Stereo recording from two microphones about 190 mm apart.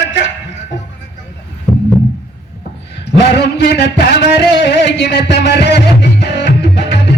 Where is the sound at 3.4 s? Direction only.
60° left (ahead or behind).